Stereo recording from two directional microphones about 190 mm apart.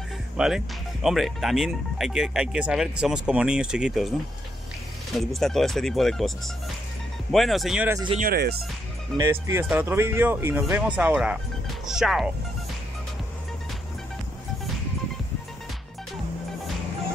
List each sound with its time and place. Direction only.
0.4 s speech: 5° right (ahead or behind)
5.1 s speech: centre (ahead or behind)
8.2 s speech: 55° right (ahead or behind)
9.1 s speech: 15° right (ahead or behind)
11.8 s music: centre (ahead or behind)